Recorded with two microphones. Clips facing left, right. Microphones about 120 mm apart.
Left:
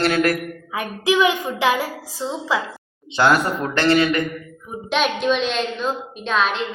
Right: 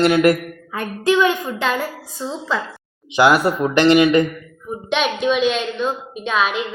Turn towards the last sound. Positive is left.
turn(degrees=-5)  # may be behind; listen again after turning